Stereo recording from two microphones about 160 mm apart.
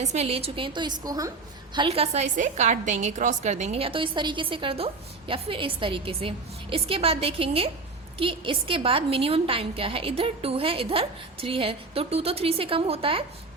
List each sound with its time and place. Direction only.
0.0 s a woman's voice: 45° right (ahead or behind); by 1.3 s 25° right (ahead or behind)
1.7 s a woman's voice: 35° right (ahead or behind)